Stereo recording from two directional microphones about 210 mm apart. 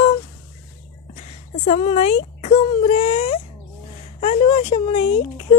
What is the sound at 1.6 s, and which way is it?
Speech, 30° left (ahead or behind).